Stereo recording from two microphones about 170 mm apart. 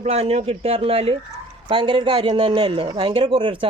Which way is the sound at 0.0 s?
35° right (ahead or behind).